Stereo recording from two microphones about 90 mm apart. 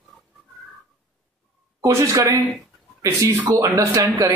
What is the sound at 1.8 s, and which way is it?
A man's voice, 35° right (ahead or behind).